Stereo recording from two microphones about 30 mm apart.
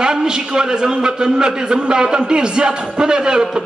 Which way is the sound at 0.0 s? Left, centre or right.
Right.